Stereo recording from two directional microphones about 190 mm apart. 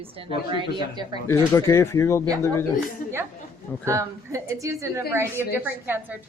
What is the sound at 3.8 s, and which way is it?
A woman's voice, 15° right (ahead or behind).